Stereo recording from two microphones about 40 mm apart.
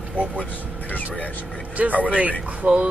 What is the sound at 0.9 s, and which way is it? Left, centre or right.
Speech, left.